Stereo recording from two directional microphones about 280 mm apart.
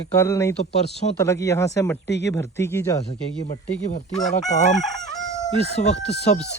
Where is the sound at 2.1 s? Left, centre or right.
Left.